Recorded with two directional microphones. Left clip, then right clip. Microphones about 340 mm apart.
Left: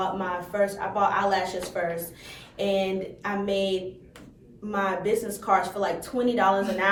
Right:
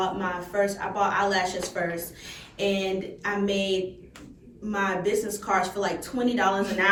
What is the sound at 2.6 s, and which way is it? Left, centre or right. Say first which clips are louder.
Speech: left 1 dB; centre.